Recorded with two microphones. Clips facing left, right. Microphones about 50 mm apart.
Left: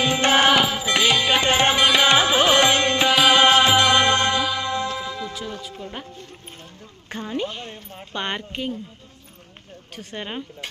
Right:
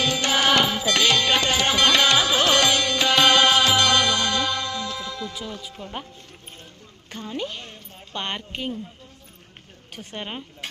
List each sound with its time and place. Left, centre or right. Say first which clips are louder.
0.0 s music: left 4 dB; left
0.5 s music: left 1 dB; centre
1.5 s music: left 3 dB; left
1.8 s music: right 1 dB; centre; by 3.1 s left
3.1 s music: even; centre
3.4 s music: left 3 dB; left
4.4 s music: left 2 dB; centre
4.7 s music: left 4 dB; left
5.6 s music: left 1 dB; centre
7.1 s a sound: left 4 dB; left
7.3 s a sound: left 3 dB; centre
8.1 s speech: left 2 dB; centre
9.9 s speech: left 2 dB; centre